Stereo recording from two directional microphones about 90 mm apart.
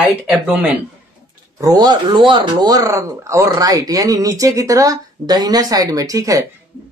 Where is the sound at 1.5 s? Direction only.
45° right (ahead or behind).